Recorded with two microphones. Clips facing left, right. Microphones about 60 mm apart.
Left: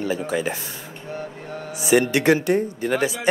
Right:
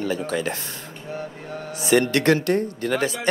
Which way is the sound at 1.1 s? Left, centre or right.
Centre.